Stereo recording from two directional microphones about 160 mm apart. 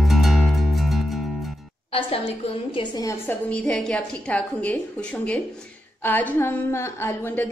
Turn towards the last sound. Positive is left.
turn(degrees=15)  # may be behind; listen again after turning